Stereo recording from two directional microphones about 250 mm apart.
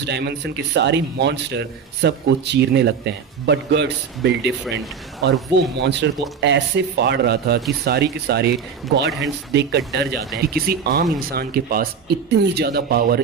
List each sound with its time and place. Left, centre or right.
0.1 s a man's voice: right
9.0 s speech: centre
9.5 s a man's voice: right